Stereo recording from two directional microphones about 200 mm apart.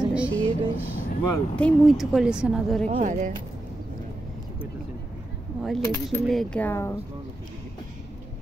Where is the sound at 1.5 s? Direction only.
5° left (ahead or behind).